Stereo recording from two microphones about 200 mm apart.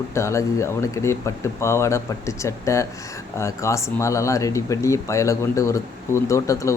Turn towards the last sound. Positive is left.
turn(degrees=15)  # may be behind; listen again after turning